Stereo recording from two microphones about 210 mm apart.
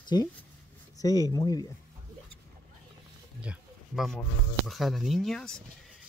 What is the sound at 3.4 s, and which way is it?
Speech, centre (ahead or behind).